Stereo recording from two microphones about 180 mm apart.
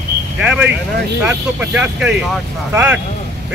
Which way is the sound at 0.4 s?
5° right (ahead or behind).